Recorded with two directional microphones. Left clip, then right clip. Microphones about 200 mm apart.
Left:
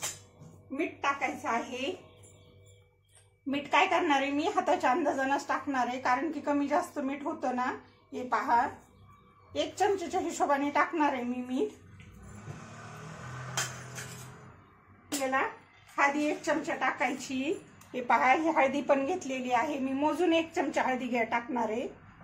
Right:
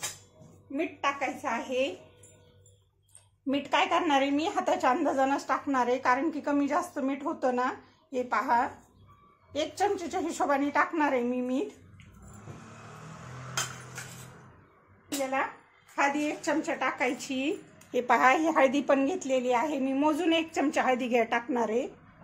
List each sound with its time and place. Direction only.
0.7 s a woman's voice: 45° right (ahead or behind)
3.4 s a woman's voice: 45° right (ahead or behind)
15.9 s a woman's voice: 50° right (ahead or behind)